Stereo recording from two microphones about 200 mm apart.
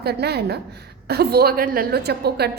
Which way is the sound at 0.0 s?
55° right (ahead or behind).